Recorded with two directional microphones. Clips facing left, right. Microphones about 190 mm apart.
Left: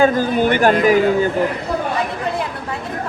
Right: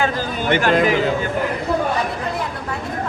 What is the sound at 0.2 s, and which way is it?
Speech, 50° left (ahead or behind).